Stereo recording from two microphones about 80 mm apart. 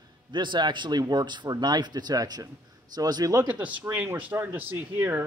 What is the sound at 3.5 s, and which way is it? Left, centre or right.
Speech, centre.